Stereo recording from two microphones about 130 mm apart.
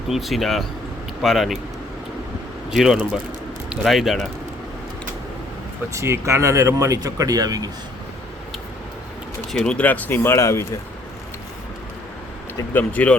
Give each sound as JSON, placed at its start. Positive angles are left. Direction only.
{"t": 0.1, "sound": "speech", "side_deg": 0}
{"t": 2.6, "sound": "speech", "side_deg": -5}
{"t": 5.9, "sound": "speech", "side_deg": -20}
{"t": 9.5, "sound": "speech", "side_deg": 5}
{"t": 12.7, "sound": "speech", "side_deg": 10}